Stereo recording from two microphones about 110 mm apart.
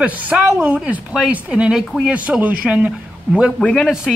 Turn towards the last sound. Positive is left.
turn(degrees=5)  # may be behind; listen again after turning